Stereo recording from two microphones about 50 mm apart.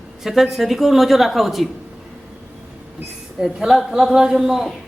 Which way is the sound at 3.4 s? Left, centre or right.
Centre.